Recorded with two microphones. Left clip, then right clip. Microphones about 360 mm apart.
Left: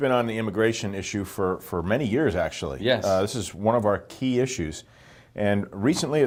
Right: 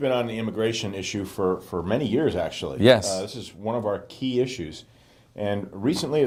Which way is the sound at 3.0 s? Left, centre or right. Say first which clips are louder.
Left 5 dB; left.